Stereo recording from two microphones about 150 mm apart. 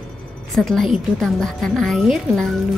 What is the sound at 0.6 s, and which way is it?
A woman's voice, centre (ahead or behind).